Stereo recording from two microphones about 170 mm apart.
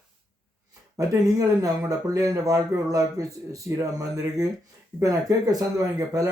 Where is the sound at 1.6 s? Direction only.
20° right (ahead or behind).